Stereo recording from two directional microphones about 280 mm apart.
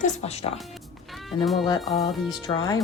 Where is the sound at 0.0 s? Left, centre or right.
Left.